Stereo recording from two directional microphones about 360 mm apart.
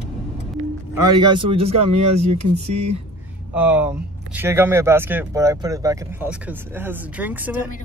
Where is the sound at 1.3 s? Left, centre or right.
Centre.